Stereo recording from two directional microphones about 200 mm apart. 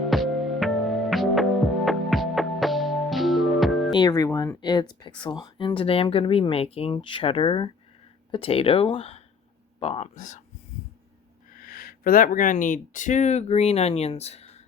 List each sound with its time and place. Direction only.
0.1 s music: centre (ahead or behind)
3.9 s speech: 20° left (ahead or behind); by 10.4 s 35° left (ahead or behind)
11.4 s speech: 45° left (ahead or behind)